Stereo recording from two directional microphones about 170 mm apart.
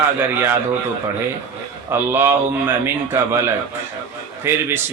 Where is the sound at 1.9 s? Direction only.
15° right (ahead or behind).